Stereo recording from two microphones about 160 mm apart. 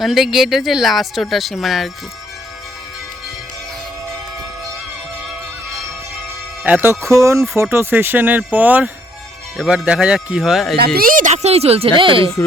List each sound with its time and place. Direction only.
0.0 s speech: centre (ahead or behind)
6.7 s speech: 10° right (ahead or behind)
10.8 s speech: 75° right (ahead or behind); by 12.3 s 35° right (ahead or behind)